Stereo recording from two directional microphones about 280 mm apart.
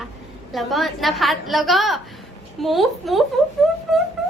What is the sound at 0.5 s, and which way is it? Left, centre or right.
A woman's voice, centre.